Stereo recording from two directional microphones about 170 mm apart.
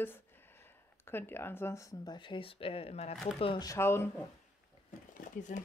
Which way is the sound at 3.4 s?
25° left (ahead or behind).